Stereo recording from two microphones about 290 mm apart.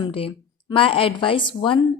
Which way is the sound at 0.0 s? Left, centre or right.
Centre.